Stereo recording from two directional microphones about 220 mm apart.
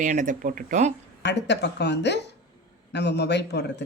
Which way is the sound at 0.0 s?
35° right (ahead or behind).